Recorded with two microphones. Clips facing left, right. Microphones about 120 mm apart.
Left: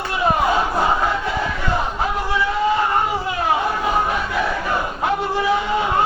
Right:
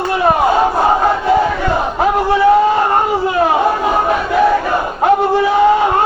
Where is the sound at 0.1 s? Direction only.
55° right (ahead or behind).